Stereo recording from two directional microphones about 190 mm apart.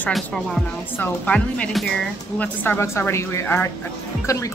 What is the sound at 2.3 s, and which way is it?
Music, 10° left (ahead or behind).